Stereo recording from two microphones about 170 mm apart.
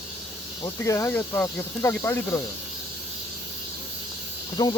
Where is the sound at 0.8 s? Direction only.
15° left (ahead or behind).